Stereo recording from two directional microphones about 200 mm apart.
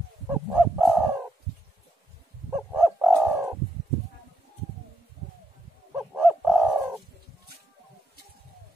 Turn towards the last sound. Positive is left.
turn(degrees=-10)  # may be behind; listen again after turning